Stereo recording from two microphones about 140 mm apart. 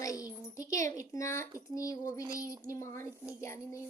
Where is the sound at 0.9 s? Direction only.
20° left (ahead or behind).